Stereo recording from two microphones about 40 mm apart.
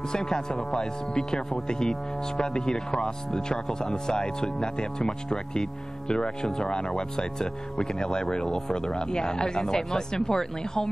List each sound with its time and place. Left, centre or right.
0.1 s speech: centre
0.6 s speech: centre
1.1 s speech: centre